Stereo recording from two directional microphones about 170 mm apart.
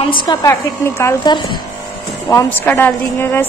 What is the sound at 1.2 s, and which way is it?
Speech, 25° left (ahead or behind).